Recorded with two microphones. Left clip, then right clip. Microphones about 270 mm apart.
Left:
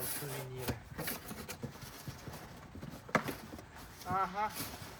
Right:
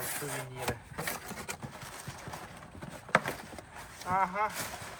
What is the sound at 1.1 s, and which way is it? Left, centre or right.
Vehicle, centre.